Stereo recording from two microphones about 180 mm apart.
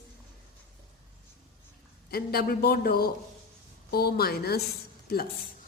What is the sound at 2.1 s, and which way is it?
Speech, 60° left (ahead or behind).